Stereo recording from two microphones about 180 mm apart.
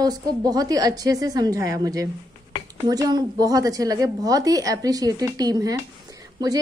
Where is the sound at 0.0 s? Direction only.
20° right (ahead or behind).